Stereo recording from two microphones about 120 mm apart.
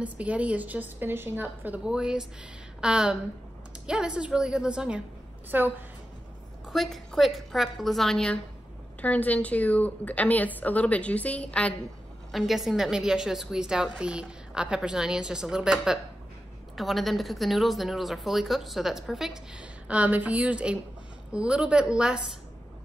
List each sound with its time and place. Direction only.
0.0 s a woman's voice: 10° right (ahead or behind)
6.7 s a woman's voice: centre (ahead or behind)
12.3 s a woman's voice: centre (ahead or behind)